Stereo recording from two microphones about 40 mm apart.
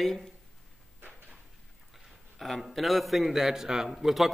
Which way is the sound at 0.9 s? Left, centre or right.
Right.